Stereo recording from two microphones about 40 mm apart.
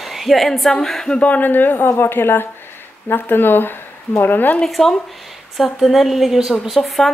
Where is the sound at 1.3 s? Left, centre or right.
Left.